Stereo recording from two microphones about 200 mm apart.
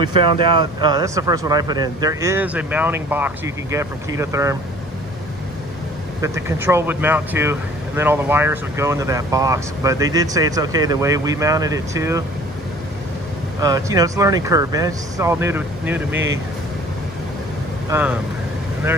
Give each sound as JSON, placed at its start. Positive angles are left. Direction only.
{"t": 0.0, "sound": "speech", "side_deg": -20}
{"t": 6.2, "sound": "speech", "side_deg": -15}
{"t": 13.6, "sound": "speech", "side_deg": -15}
{"t": 17.8, "sound": "speech", "side_deg": -10}